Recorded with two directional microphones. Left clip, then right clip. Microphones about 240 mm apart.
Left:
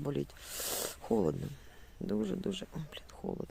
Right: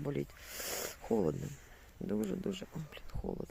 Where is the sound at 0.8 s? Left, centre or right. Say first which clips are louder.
Left 1 dB; centre.